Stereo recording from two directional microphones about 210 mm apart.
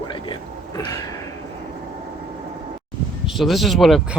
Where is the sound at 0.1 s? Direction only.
20° left (ahead or behind).